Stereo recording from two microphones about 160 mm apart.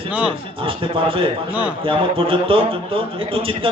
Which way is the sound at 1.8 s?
35° right (ahead or behind).